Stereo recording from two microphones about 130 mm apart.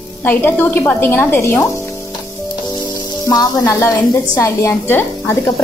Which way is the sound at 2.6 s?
30° left (ahead or behind).